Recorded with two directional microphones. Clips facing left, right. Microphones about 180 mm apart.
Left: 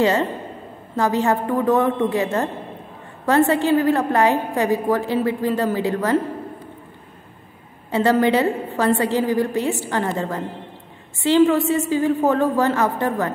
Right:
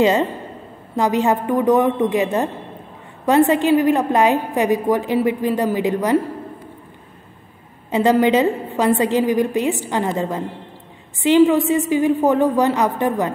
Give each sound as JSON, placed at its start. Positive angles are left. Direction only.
{"t": 0.0, "sound": "a man's voice", "side_deg": -20}
{"t": 7.9, "sound": "a woman's voice", "side_deg": -15}